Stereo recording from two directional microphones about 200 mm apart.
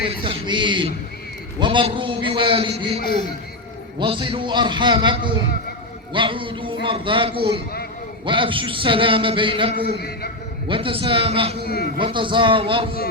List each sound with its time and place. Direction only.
0.2 s a man's voice: 25° right (ahead or behind)
4.0 s a man's voice: 25° right (ahead or behind)
11.6 s a man's voice: 50° left (ahead or behind)
11.9 s a man's voice: 25° right (ahead or behind)